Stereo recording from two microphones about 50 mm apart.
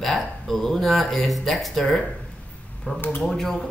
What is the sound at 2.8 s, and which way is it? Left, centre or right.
Speech, left.